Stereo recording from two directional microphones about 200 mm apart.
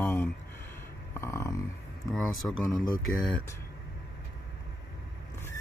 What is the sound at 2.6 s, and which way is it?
Speech, 20° left (ahead or behind).